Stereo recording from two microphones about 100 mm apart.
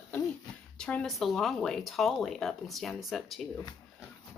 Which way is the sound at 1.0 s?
Centre (ahead or behind).